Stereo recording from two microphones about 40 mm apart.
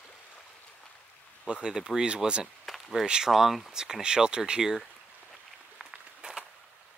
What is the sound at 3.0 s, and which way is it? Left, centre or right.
Speech, centre.